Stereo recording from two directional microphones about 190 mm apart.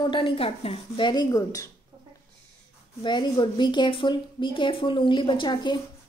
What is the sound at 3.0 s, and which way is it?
A woman's voice, 25° left (ahead or behind).